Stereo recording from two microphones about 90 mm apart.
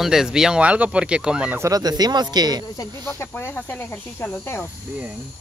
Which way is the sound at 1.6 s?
45° right (ahead or behind).